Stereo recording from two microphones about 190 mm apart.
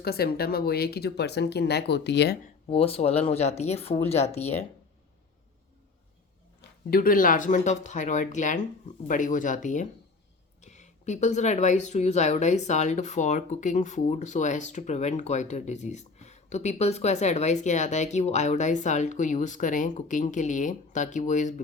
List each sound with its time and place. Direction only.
0.0 s speech: 55° left (ahead or behind)
2.6 s speech: 30° left (ahead or behind)
6.9 s speech: 50° left (ahead or behind)